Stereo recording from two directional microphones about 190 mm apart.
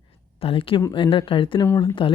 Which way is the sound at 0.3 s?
30° left (ahead or behind).